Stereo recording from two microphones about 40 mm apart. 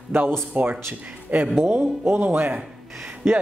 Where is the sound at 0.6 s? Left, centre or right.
Right.